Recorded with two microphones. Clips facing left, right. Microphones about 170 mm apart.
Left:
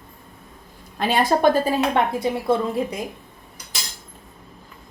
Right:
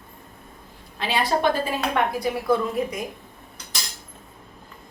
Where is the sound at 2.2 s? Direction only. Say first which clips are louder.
Left 1 dB; 25° left (ahead or behind).